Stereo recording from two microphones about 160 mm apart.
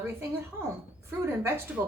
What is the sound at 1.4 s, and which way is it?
Speech, 15° right (ahead or behind).